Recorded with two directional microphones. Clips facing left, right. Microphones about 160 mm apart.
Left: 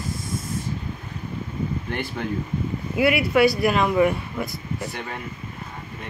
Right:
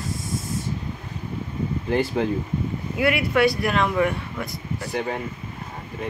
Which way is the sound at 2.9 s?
10° left (ahead or behind).